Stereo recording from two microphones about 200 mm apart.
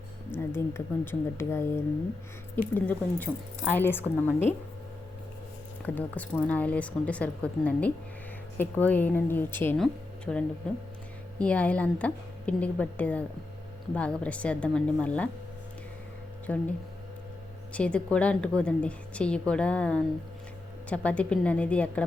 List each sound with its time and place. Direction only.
0.3 s speech: 10° left (ahead or behind)
2.7 s speech: 10° left (ahead or behind)
5.8 s a woman's voice: 10° left (ahead or behind)
16.5 s speech: 5° left (ahead or behind)
17.7 s a woman's voice: 5° left (ahead or behind)